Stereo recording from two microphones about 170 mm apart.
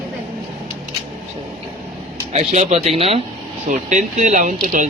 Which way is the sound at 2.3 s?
40° right (ahead or behind).